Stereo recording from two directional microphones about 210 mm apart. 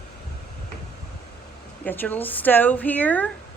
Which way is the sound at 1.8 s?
10° left (ahead or behind).